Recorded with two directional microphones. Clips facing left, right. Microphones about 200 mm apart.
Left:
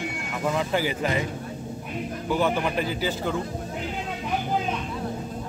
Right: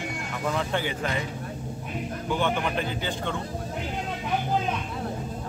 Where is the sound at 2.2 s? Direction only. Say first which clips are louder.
Left 3 dB; 5° left (ahead or behind).